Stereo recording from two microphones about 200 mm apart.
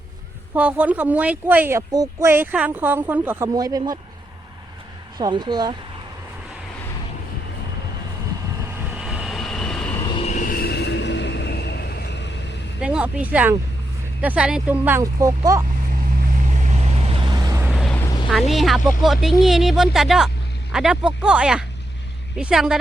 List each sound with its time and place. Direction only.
0.5 s speech: 5° right (ahead or behind)
5.1 s speech: 20° right (ahead or behind)
8.9 s vehicle: 5° right (ahead or behind)
10.1 s vehicle: 30° left (ahead or behind); by 12.5 s 60° left (ahead or behind)
12.8 s speech: 5° right (ahead or behind)
16.5 s vehicle: 35° right (ahead or behind); by 17.7 s 15° right (ahead or behind)
17.7 s vehicle: centre (ahead or behind)
17.9 s vehicle: 15° left (ahead or behind)
18.3 s speech: centre (ahead or behind)